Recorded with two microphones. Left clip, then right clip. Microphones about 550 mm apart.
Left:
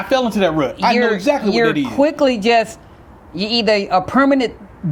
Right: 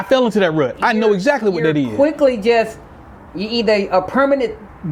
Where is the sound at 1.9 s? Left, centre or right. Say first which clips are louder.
Right 1 dB; centre.